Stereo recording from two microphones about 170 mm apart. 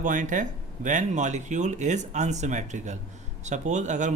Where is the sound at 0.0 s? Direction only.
45° right (ahead or behind).